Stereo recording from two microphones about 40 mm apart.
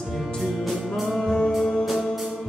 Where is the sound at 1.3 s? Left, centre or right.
Centre.